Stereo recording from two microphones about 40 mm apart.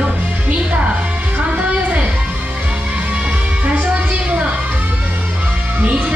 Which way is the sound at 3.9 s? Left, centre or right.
Right.